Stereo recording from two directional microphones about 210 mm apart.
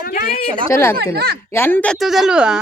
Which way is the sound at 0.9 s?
50° right (ahead or behind).